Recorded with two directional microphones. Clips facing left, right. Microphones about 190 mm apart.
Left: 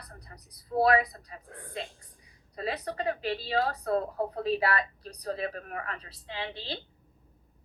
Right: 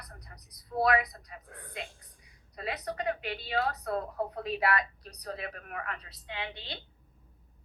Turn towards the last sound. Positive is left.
turn(degrees=30)  # may be behind; listen again after turning